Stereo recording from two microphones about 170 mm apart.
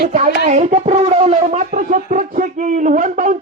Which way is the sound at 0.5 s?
40° right (ahead or behind).